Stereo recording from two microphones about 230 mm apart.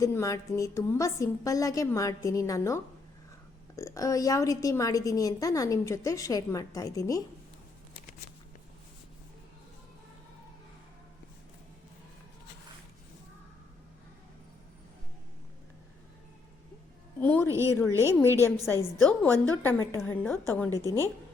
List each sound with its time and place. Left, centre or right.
0.0 s a woman's voice: centre
17.2 s speech: centre
17.5 s a woman's voice: centre
17.7 s a woman's voice: centre
18.3 s a woman's voice: centre
18.7 s a woman's voice: centre